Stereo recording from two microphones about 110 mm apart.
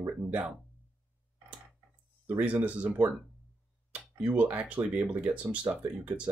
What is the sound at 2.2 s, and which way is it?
Speech, 15° right (ahead or behind).